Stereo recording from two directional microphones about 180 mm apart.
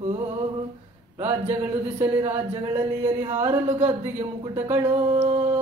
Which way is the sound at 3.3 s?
35° right (ahead or behind).